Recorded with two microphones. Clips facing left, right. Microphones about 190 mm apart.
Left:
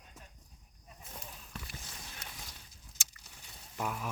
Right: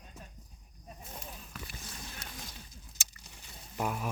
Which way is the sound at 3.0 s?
10° right (ahead or behind).